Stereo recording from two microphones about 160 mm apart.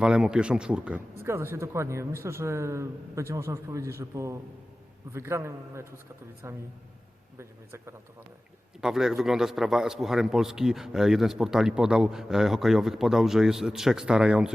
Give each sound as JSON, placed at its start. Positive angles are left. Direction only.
{"t": 0.0, "sound": "a man's voice", "side_deg": -5}
{"t": 8.8, "sound": "a man's voice", "side_deg": -5}